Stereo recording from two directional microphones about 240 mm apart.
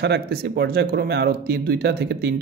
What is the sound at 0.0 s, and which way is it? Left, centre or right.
A man's voice, right.